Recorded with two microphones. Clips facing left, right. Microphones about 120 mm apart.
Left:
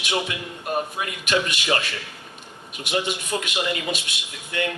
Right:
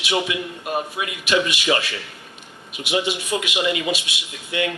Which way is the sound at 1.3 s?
15° right (ahead or behind).